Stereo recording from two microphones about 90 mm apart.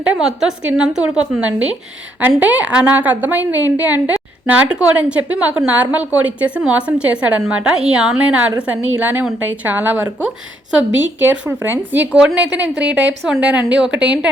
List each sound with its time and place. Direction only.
0.0 s a woman's voice: 10° right (ahead or behind)
11.2 s a woman's voice: 20° right (ahead or behind)